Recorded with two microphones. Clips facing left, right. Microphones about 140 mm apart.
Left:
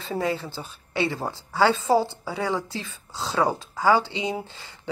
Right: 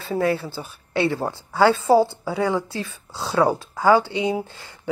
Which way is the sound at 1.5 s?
10° right (ahead or behind).